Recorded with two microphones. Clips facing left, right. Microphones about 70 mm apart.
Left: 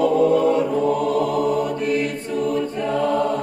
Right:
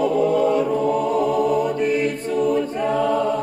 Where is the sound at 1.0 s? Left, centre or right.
Right.